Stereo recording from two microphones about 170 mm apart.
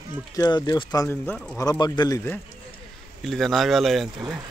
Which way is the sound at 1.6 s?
25° left (ahead or behind).